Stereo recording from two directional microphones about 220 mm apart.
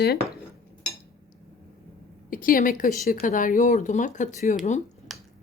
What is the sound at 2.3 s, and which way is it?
Speech, 40° left (ahead or behind).